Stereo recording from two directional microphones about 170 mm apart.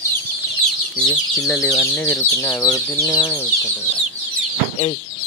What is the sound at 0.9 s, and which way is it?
Speech, 5° left (ahead or behind).